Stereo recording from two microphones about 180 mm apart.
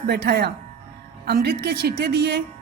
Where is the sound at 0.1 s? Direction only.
60° right (ahead or behind).